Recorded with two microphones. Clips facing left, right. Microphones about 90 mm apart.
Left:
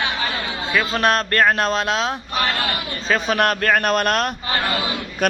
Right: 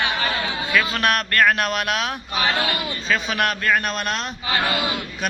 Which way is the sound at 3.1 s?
40° left (ahead or behind).